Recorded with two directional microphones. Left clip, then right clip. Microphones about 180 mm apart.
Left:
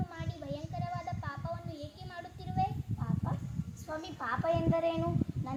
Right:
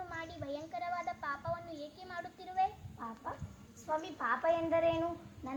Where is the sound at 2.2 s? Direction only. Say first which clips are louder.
Even; 15° left (ahead or behind).